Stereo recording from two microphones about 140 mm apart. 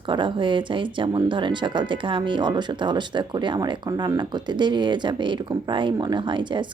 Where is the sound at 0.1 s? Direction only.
35° right (ahead or behind).